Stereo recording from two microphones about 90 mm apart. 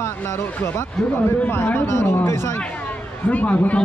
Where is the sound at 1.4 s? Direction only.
20° left (ahead or behind).